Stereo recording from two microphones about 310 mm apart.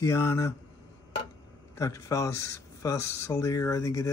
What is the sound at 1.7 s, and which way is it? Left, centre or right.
Speech, centre.